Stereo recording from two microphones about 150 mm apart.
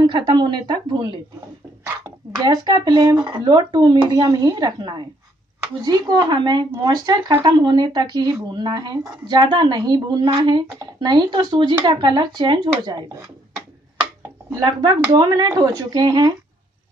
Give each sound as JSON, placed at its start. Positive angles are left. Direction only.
{"t": 0.0, "sound": "a woman's voice", "side_deg": -30}
{"t": 14.6, "sound": "speech", "side_deg": -30}